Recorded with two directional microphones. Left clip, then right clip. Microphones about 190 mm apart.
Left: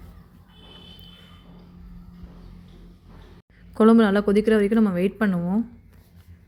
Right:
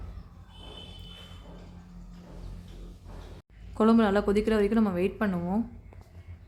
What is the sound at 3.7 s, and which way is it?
A woman's voice, 20° left (ahead or behind).